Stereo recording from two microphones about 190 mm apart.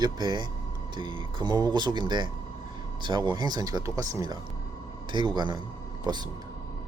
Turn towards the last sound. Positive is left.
turn(degrees=-20)  # may be behind; listen again after turning